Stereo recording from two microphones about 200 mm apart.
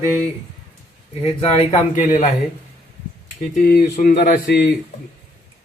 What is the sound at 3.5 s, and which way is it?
Speech, 50° left (ahead or behind).